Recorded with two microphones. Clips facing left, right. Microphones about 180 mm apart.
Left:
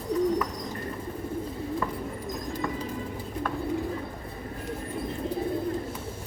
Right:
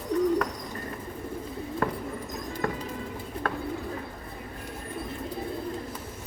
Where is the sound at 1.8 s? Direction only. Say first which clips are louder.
Right 7 dB; 70° right (ahead or behind).